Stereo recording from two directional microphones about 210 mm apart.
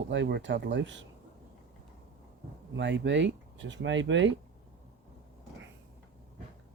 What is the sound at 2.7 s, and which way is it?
Speech, 60° right (ahead or behind).